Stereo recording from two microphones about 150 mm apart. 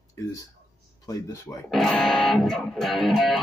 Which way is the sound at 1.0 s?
20° left (ahead or behind).